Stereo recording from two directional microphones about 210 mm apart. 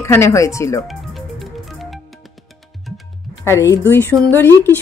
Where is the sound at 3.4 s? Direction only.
15° left (ahead or behind).